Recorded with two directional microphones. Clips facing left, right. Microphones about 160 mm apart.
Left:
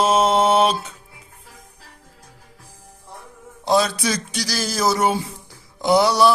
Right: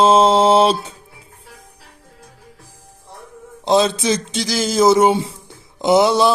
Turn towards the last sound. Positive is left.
turn(degrees=-20)  # may be behind; listen again after turning